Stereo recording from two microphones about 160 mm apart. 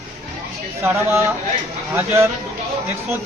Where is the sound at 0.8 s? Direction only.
15° right (ahead or behind).